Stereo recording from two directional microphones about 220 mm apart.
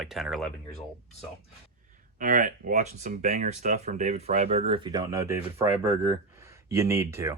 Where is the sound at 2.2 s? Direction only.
40° right (ahead or behind).